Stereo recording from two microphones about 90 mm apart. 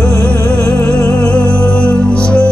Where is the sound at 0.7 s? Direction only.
30° left (ahead or behind).